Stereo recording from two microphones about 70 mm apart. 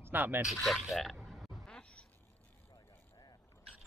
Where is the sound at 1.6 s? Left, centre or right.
Centre.